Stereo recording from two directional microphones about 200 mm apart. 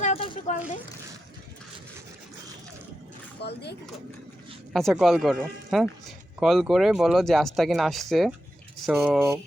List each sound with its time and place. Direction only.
0.0 s a sound: 30° left (ahead or behind)
3.4 s speech: 55° left (ahead or behind)
4.7 s speech: centre (ahead or behind)